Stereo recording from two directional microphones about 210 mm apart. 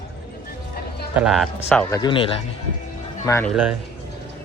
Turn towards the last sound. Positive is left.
turn(degrees=10)  # may be behind; listen again after turning